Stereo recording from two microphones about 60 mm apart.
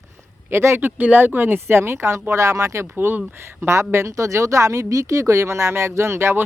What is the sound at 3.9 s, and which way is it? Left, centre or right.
Speech, right.